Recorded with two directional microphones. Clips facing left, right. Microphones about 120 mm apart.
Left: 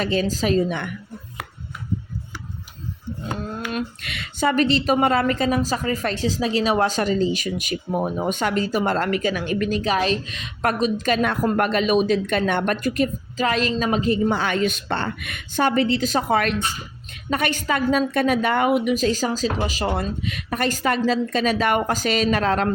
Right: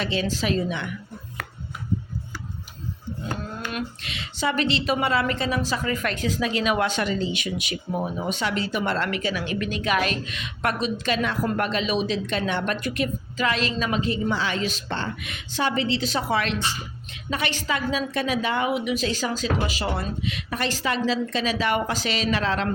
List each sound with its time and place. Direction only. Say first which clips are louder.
0.0 s speech: left 4 dB; 40° left (ahead or behind)
4.0 s a woman's voice: left 5 dB; 55° left (ahead or behind)